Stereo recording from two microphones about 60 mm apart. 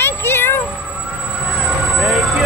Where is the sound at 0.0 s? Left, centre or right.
Left.